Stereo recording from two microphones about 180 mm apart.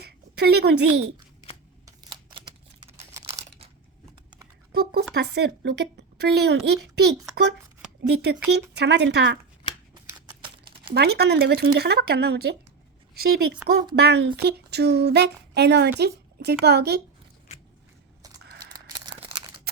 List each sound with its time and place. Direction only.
0.0 s a woman's voice: 65° right (ahead or behind)
1.8 s a sound: 25° right (ahead or behind)
3.2 s crumpling: 15° right (ahead or behind)
4.7 s speech: 60° right (ahead or behind)
10.9 s speech: 60° right (ahead or behind)
13.9 s speech: 70° right (ahead or behind)
18.7 s a sound: 25° right (ahead or behind)